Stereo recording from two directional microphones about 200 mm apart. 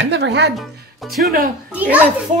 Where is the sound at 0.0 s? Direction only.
60° right (ahead or behind).